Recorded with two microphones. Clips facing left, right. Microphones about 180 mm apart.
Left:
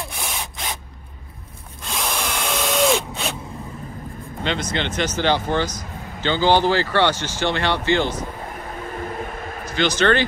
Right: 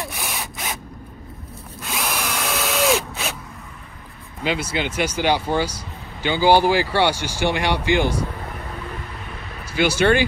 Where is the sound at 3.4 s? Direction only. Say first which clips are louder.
Left 7 dB; 30° left (ahead or behind); by 4.3 s 45° left (ahead or behind).